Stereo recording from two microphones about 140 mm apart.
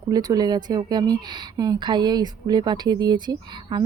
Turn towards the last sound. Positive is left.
turn(degrees=-30)  # may be behind; listen again after turning